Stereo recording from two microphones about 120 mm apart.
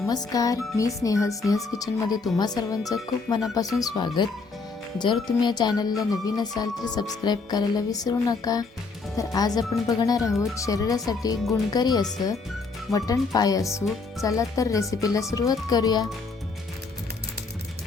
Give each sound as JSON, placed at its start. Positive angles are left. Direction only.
{"t": 0.1, "sound": "speech", "side_deg": 30}